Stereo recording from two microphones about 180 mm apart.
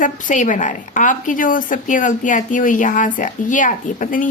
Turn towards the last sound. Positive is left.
turn(degrees=50)  # may be behind; listen again after turning